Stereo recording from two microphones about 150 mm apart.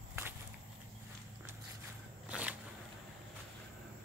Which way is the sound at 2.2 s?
10° right (ahead or behind).